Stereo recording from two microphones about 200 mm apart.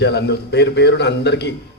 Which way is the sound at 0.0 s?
55° left (ahead or behind).